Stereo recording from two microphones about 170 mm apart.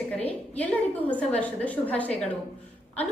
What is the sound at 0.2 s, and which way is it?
A woman's voice, 10° left (ahead or behind).